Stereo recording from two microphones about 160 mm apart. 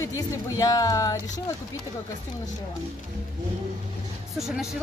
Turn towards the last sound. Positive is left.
turn(degrees=0)  # may be behind; listen again after turning